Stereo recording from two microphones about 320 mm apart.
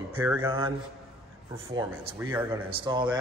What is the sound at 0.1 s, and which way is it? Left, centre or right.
Speech, centre.